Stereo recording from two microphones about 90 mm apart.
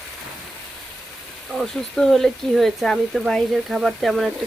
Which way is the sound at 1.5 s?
5° left (ahead or behind).